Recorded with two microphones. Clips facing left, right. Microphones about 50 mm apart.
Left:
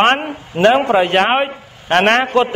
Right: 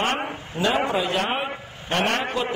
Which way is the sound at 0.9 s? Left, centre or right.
Left.